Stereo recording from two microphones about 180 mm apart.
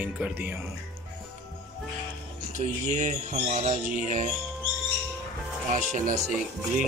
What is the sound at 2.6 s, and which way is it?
Music, 40° right (ahead or behind).